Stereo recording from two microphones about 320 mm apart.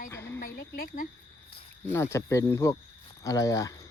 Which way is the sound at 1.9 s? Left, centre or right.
Centre.